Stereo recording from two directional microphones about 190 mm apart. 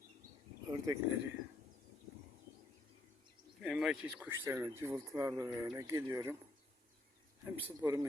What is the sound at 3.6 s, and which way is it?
Speech, centre (ahead or behind).